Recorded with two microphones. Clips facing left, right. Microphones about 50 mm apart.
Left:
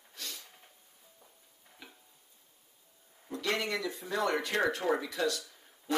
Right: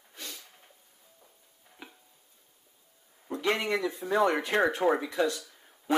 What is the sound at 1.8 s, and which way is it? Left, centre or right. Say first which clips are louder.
Tick-tock: right 4 dB; right.